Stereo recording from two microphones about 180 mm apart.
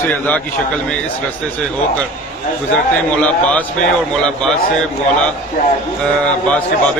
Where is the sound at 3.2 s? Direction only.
5° left (ahead or behind).